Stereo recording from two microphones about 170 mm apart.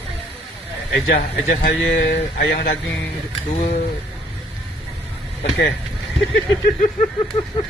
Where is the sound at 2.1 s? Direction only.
75° left (ahead or behind).